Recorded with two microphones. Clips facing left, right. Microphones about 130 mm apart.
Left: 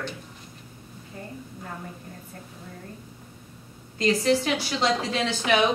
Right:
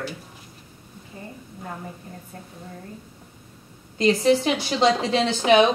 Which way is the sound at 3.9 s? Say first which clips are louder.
Right 4 dB; 20° right (ahead or behind).